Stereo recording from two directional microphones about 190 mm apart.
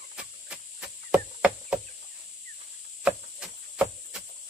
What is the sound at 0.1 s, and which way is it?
Chop, 5° right (ahead or behind).